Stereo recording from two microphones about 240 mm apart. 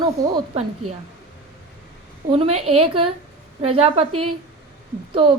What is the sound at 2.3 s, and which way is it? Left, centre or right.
Speech, right.